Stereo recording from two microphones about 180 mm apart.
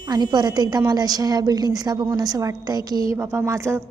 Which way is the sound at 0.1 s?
25° right (ahead or behind).